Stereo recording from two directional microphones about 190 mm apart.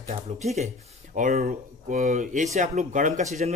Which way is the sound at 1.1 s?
40° right (ahead or behind).